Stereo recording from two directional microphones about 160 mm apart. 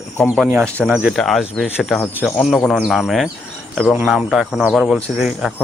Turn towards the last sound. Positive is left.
turn(degrees=0)  # may be behind; listen again after turning